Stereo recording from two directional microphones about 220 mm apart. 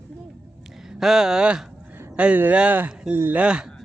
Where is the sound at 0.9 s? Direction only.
Centre (ahead or behind).